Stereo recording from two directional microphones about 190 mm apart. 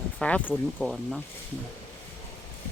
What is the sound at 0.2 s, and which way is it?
Speech, 5° left (ahead or behind).